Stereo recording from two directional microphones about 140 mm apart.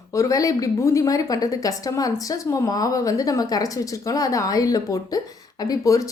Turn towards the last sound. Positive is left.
turn(degrees=25)  # may be behind; listen again after turning